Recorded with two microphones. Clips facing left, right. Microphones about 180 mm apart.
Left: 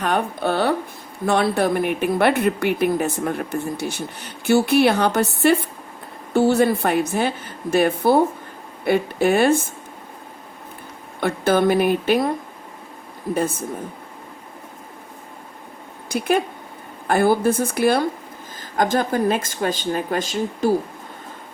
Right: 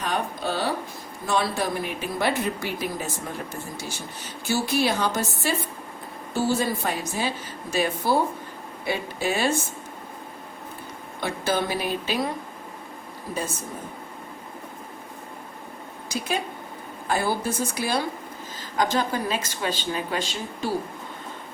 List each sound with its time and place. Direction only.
0.0 s speech: 60° left (ahead or behind)
11.2 s speech: 55° left (ahead or behind)
13.3 s speech: 55° left (ahead or behind)
16.0 s a woman's voice: 55° left (ahead or behind)